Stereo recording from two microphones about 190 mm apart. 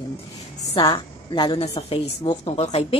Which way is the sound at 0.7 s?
25° left (ahead or behind).